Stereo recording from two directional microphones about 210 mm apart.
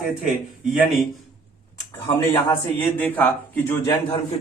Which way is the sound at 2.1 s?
25° left (ahead or behind).